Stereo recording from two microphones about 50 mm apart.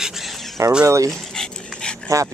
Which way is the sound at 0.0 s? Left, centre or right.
Centre.